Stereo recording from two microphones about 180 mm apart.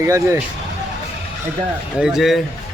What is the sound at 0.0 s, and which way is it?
Speech, 15° right (ahead or behind).